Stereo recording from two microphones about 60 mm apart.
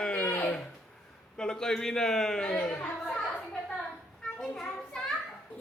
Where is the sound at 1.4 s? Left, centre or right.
Centre.